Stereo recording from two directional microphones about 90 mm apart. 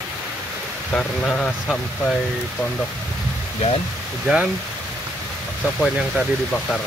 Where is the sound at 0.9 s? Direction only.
10° left (ahead or behind).